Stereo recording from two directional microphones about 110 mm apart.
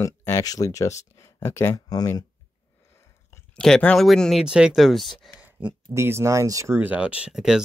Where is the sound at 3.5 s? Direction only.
5° left (ahead or behind).